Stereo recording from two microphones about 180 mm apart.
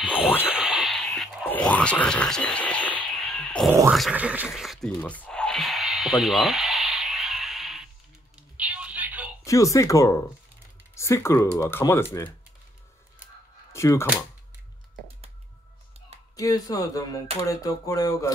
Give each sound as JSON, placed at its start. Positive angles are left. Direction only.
{"t": 0.5, "sound": "a sound", "side_deg": -5}
{"t": 8.4, "sound": "music", "side_deg": -5}
{"t": 9.4, "sound": "speech", "side_deg": 15}
{"t": 13.7, "sound": "speech", "side_deg": 15}
{"t": 16.3, "sound": "speech", "side_deg": 20}